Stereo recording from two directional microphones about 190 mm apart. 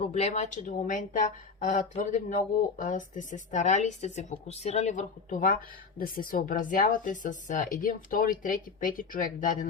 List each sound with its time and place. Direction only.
0.0 s a woman's voice: 35° left (ahead or behind)